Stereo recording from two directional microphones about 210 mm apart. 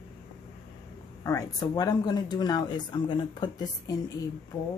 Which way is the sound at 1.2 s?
15° left (ahead or behind).